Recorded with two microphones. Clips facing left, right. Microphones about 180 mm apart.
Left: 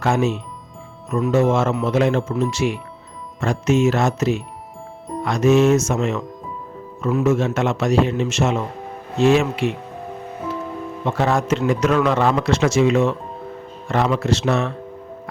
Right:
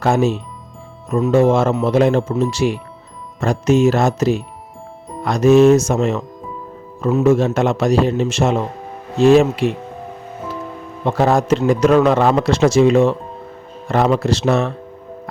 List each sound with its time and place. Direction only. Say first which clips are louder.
0.0 s a man's voice: right 3 dB; 35° right (ahead or behind)
11.0 s a man's voice: right 5 dB; 35° right (ahead or behind)